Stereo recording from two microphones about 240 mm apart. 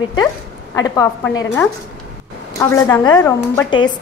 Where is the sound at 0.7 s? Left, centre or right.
Centre.